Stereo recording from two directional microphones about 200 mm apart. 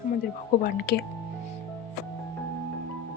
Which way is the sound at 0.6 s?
50° left (ahead or behind).